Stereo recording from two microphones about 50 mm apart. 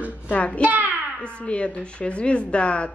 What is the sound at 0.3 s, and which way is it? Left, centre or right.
Speech, left.